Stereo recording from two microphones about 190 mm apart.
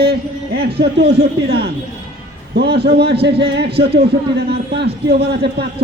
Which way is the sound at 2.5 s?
60° right (ahead or behind).